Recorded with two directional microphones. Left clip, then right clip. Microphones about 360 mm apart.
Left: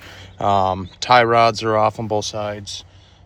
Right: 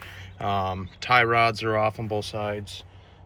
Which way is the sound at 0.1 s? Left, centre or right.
Centre.